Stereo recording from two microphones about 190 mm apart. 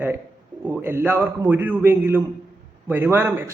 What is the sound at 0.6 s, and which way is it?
A man's voice, 10° right (ahead or behind).